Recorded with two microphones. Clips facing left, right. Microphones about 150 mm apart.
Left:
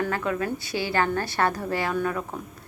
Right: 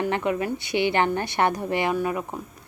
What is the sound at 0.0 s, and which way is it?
A woman's voice, 20° right (ahead or behind).